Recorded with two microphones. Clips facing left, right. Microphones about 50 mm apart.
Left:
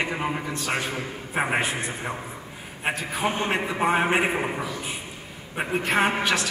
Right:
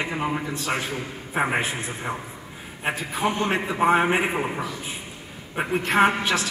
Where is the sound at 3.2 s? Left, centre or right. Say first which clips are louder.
Right 2 dB; left.